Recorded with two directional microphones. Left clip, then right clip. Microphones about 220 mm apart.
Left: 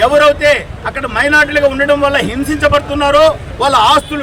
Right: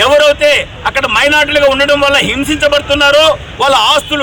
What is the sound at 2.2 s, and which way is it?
Speech, 20° right (ahead or behind).